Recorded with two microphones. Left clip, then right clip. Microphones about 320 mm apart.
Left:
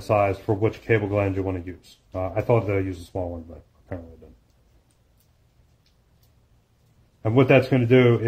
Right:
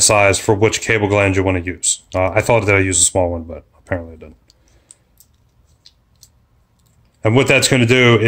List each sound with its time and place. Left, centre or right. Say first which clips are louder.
0.1 s speech: right 3 dB; right
7.2 s speech: right 5 dB; right